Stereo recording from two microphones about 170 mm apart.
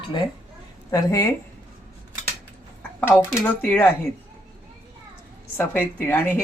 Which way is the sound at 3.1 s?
10° left (ahead or behind).